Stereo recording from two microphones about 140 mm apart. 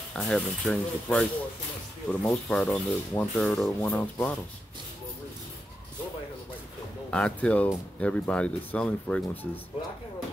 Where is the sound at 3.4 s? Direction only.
5° left (ahead or behind).